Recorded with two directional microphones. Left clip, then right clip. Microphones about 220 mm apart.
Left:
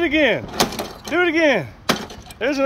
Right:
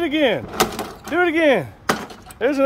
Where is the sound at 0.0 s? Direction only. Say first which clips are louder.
Left 2 dB; 10° right (ahead or behind).